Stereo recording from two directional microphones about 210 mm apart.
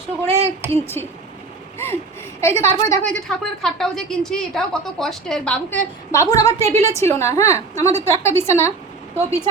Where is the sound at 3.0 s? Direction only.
5° left (ahead or behind).